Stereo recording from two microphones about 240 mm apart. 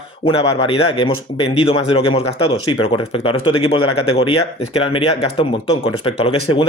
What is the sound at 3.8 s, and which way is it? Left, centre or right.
Speech, left.